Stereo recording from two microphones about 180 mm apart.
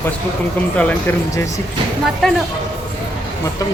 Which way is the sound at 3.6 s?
20° left (ahead or behind).